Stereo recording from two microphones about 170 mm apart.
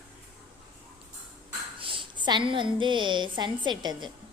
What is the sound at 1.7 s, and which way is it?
A woman's voice, 30° right (ahead or behind).